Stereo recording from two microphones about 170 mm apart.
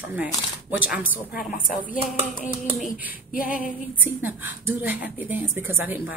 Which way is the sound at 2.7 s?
5° right (ahead or behind).